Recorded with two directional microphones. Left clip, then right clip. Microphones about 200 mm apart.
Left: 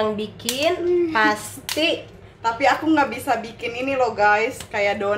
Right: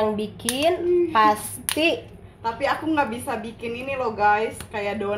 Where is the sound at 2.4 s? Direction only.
25° left (ahead or behind).